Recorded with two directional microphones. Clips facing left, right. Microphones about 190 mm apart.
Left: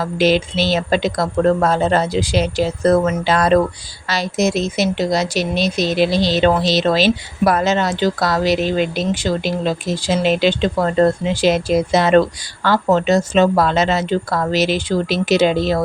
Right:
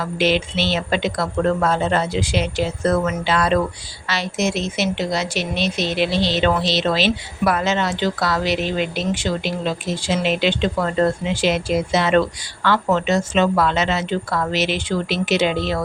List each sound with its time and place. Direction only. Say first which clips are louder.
0.0 s a woman's voice: left 4 dB; 40° left (ahead or behind)